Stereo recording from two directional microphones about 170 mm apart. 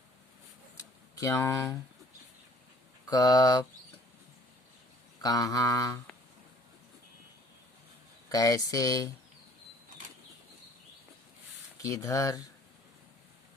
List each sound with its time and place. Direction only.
1.2 s speech: 20° left (ahead or behind)
3.1 s speech: 20° left (ahead or behind)
5.2 s speech: 20° left (ahead or behind)
8.3 s speech: 20° left (ahead or behind)
11.8 s speech: 20° left (ahead or behind)